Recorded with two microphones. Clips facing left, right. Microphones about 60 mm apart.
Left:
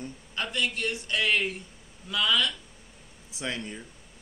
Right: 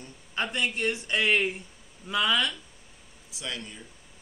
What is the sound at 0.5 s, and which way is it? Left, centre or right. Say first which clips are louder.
Speech: left 1 dB; centre.